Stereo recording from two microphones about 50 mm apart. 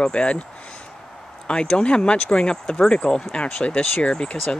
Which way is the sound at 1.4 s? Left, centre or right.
Centre.